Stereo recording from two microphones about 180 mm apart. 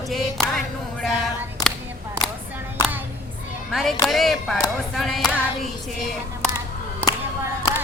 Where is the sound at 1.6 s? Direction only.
20° left (ahead or behind).